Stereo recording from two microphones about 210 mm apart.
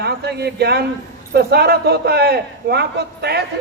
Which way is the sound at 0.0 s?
50° right (ahead or behind).